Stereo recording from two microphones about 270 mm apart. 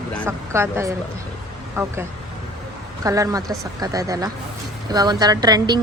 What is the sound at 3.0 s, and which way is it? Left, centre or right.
Speech, centre.